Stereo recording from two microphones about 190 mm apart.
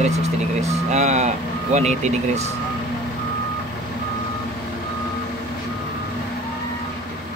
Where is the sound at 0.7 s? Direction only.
35° right (ahead or behind).